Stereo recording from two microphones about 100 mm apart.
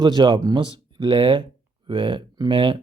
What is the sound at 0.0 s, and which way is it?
Speech, 45° right (ahead or behind).